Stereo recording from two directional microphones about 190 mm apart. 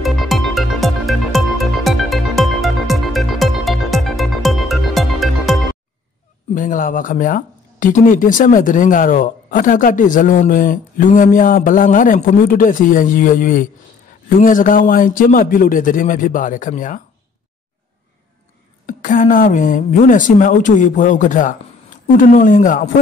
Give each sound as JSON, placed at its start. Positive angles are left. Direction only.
{"t": 0.0, "sound": "music", "side_deg": 0}
{"t": 6.5, "sound": "speech", "side_deg": 45}
{"t": 18.9, "sound": "speech", "side_deg": 45}